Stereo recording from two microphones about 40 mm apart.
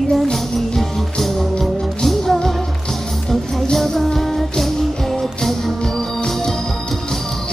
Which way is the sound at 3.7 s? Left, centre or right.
Centre.